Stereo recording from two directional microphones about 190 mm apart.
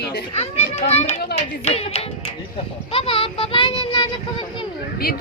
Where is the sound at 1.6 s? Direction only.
30° left (ahead or behind).